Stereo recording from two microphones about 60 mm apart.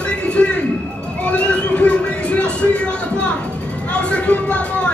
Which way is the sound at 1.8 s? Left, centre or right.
Centre.